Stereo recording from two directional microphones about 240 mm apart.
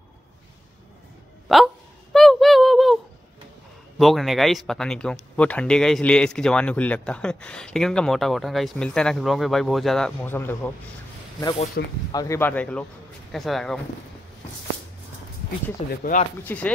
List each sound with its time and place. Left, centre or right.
1.5 s speech: centre
2.1 s a sound: centre
4.0 s speech: centre
11.8 s speech: left
12.1 s speech: centre
15.9 s speech: left
16.4 s speech: centre